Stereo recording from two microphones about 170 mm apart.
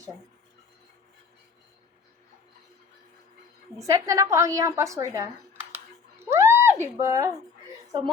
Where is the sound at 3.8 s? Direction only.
20° right (ahead or behind).